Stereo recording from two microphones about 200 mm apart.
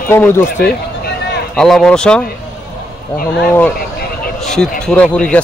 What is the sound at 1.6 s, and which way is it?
Speech, 5° left (ahead or behind).